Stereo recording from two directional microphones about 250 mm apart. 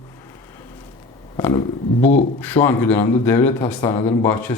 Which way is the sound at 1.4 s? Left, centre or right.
Centre.